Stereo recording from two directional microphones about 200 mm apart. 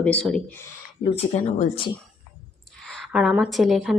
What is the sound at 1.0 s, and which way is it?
Speech, 35° left (ahead or behind).